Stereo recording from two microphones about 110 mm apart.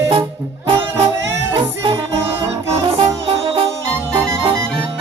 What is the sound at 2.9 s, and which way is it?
Music, 55° right (ahead or behind).